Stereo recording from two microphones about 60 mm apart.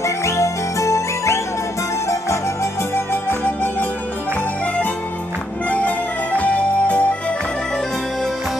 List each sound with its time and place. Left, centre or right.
0.0 s music: left
5.7 s music: left